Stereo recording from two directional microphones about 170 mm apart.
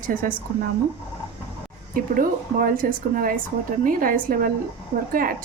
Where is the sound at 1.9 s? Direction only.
55° right (ahead or behind).